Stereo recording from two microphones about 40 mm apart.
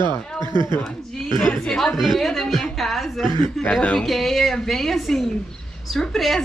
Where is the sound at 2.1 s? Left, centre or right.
Centre.